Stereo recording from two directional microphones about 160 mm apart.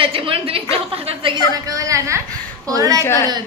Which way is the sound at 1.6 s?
20° right (ahead or behind).